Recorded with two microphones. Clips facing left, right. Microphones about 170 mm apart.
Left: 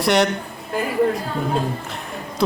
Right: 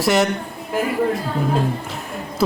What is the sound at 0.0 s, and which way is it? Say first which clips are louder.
Speech: even; centre (ahead or behind).